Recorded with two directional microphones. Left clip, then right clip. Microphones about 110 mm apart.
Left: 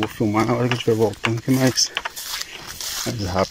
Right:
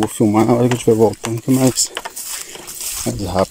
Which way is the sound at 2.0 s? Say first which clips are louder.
Even; 90° right.